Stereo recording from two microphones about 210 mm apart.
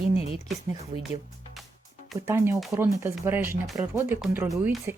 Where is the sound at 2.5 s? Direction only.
10° right (ahead or behind).